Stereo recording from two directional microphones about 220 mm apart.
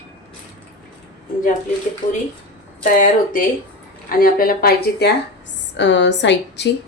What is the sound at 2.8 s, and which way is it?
A woman's voice, 40° left (ahead or behind).